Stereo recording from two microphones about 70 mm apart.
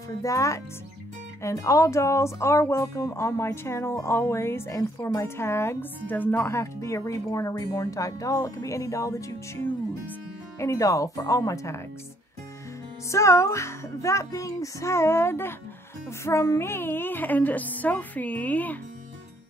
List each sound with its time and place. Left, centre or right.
0.2 s speech: left
6.5 s speech: left
10.6 s speech: left
13.1 s a woman's voice: left